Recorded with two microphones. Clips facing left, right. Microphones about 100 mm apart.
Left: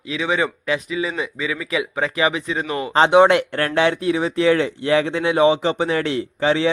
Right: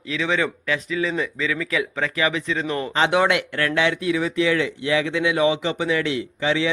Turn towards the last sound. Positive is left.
turn(degrees=40)  # may be behind; listen again after turning